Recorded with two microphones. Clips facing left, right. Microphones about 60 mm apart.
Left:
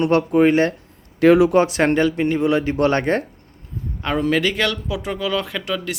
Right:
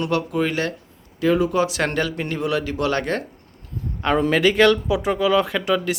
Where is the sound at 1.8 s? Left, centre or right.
Left.